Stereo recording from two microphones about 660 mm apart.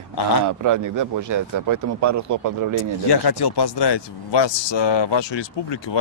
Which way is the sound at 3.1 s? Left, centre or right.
Left.